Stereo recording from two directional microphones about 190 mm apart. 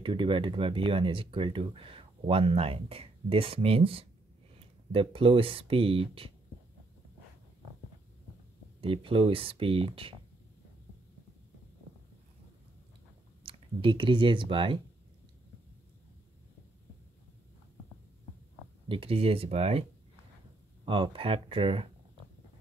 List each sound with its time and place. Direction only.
0.0 s speech: 25° right (ahead or behind)
8.8 s speech: 30° right (ahead or behind)
13.4 s speech: 30° right (ahead or behind)
18.9 s speech: 30° right (ahead or behind)